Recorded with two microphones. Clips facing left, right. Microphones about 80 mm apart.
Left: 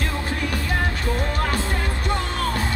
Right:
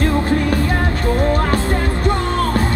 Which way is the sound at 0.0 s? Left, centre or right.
Right.